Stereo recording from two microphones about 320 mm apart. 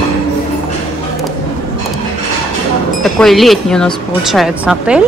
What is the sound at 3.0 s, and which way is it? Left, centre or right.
Speech, centre.